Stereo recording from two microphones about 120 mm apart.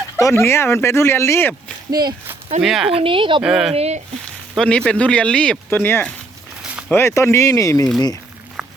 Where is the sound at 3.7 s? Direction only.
60° right (ahead or behind).